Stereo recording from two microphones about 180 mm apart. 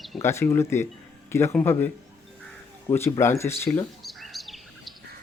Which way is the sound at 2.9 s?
15° left (ahead or behind).